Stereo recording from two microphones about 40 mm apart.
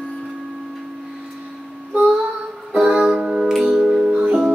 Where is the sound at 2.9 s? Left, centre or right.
Right.